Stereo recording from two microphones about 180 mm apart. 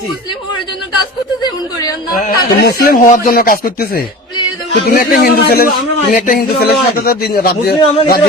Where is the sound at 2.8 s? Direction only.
50° left (ahead or behind).